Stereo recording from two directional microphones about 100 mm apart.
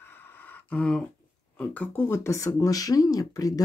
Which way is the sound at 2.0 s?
25° left (ahead or behind).